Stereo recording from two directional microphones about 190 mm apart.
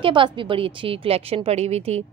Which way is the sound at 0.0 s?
25° right (ahead or behind).